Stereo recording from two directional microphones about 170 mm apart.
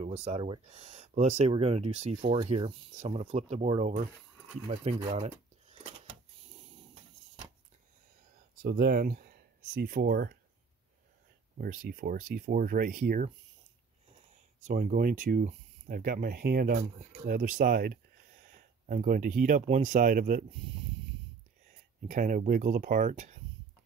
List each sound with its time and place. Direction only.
0.0 s speech: 40° right (ahead or behind)
4.6 s a sound: 40° right (ahead or behind)
8.6 s speech: 65° right (ahead or behind)
11.5 s speech: 60° right (ahead or behind)
14.6 s speech: 50° right (ahead or behind)
18.4 s a sound: 50° right (ahead or behind)
19.6 s speech: 45° right (ahead or behind)
22.0 s speech: 50° right (ahead or behind)